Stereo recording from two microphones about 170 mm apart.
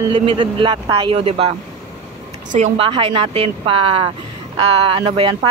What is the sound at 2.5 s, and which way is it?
Speech, 40° right (ahead or behind).